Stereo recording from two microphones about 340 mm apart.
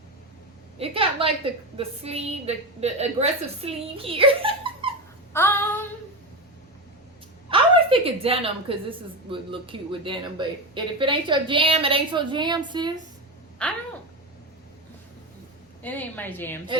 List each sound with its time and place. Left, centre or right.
0.8 s a sound: centre
1.7 s a woman's voice: centre
5.3 s female singing: centre
7.5 s a woman's voice: centre
13.6 s speech: centre
15.8 s speech: centre